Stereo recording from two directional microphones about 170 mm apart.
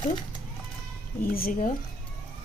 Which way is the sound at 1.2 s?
60° left (ahead or behind).